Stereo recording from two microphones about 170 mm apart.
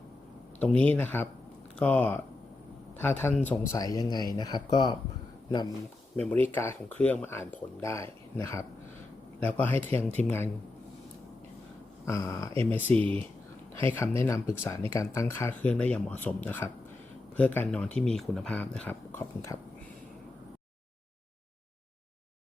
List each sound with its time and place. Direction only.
0.6 s speech: 10° left (ahead or behind)
3.8 s speech: 20° left (ahead or behind)
6.1 s speech: 10° left (ahead or behind)
12.0 s speech: 20° left (ahead or behind)